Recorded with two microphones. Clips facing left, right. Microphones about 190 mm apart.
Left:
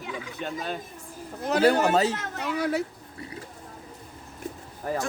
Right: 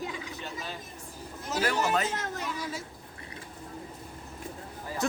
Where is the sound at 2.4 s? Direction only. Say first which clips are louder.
Left 9 dB; 65° left (ahead or behind).